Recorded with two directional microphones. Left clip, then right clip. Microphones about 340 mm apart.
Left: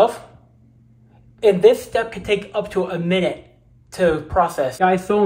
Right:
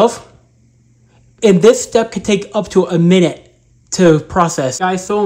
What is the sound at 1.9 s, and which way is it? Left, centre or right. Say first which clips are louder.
Speech: right 6 dB; centre.